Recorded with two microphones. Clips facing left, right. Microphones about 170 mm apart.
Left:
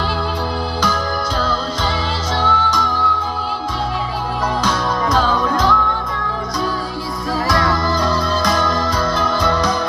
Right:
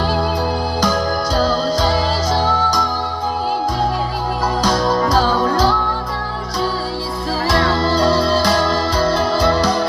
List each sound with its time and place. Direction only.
1.4 s music: 40° right (ahead or behind)
4.6 s music: 35° right (ahead or behind)
7.4 s music: 30° right (ahead or behind)